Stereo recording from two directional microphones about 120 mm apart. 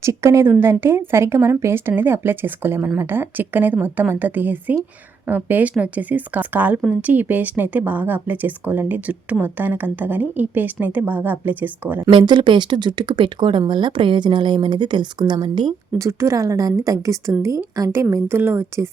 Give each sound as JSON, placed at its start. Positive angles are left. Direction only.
{"t": 0.0, "sound": "a woman's voice", "side_deg": -25}
{"t": 12.1, "sound": "speech", "side_deg": -40}
{"t": 16.0, "sound": "speech", "side_deg": -25}